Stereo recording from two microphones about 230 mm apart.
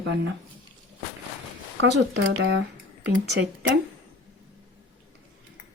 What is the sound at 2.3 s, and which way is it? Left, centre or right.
Speech, right.